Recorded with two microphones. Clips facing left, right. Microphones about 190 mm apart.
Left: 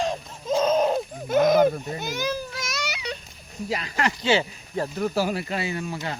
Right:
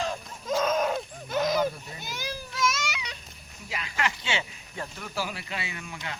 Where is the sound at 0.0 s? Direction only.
30° left (ahead or behind).